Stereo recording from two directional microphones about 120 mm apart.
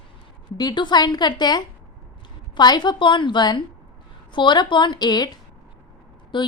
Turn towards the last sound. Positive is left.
turn(degrees=40)  # may be behind; listen again after turning